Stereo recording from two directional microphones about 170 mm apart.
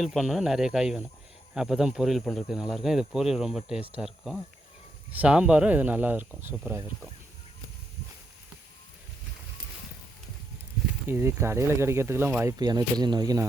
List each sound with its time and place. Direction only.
0.0 s speech: centre (ahead or behind)
11.1 s speech: 15° right (ahead or behind)